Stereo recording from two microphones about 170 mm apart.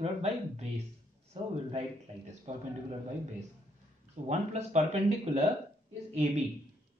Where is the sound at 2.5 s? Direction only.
40° right (ahead or behind).